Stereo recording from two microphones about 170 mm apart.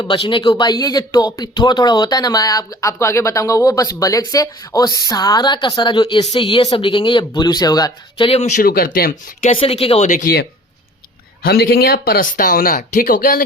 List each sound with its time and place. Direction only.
0.0 s speech: 30° left (ahead or behind)
8.3 s speech: 40° left (ahead or behind)
8.6 s speech: 60° left (ahead or behind)
9.4 s speech: 35° left (ahead or behind)
10.1 s speech: 55° left (ahead or behind)
11.4 s speech: 60° left (ahead or behind)